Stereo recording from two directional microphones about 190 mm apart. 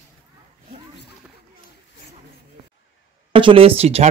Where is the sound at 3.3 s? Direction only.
30° right (ahead or behind).